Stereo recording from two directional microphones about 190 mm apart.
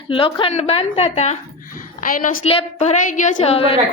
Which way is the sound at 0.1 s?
25° left (ahead or behind).